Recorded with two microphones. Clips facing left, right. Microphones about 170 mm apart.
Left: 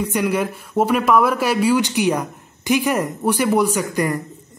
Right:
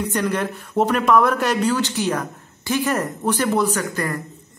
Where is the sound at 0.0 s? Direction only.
10° left (ahead or behind).